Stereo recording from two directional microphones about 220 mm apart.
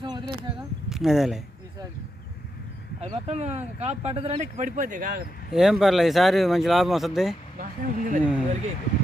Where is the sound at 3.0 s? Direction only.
30° right (ahead or behind).